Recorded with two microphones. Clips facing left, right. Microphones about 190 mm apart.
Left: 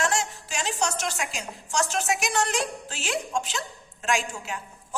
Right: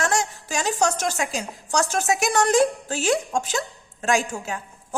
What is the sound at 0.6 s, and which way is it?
A woman's voice, 45° right (ahead or behind).